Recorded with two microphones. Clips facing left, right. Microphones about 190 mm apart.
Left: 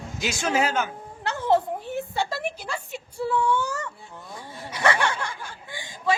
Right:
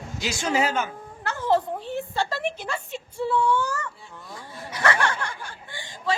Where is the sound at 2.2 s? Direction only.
10° left (ahead or behind).